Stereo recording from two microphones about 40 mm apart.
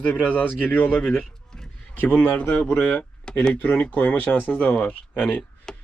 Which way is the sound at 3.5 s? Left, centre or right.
Left.